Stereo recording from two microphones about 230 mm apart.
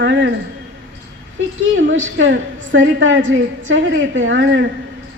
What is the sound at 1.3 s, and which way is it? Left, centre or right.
A woman's voice, right.